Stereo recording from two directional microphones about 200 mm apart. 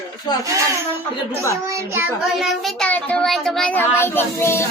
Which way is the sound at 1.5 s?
10° right (ahead or behind).